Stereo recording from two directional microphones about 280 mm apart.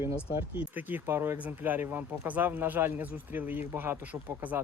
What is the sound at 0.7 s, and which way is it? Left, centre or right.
Speech, centre.